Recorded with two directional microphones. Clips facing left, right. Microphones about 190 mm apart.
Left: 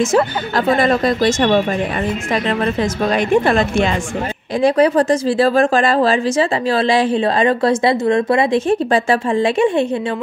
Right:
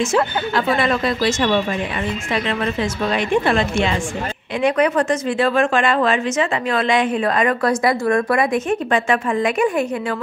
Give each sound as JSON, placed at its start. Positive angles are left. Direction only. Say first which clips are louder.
{"t": 0.0, "sound": "a woman's voice", "louder": "left 3 dB", "side_deg": 40}